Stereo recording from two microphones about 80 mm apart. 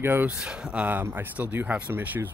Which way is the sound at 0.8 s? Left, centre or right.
Right.